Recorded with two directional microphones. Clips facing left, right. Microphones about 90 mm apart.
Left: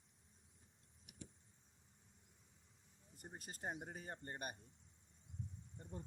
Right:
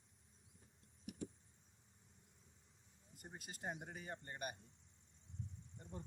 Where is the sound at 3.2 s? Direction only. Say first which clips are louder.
Left 1 dB; 40° left (ahead or behind).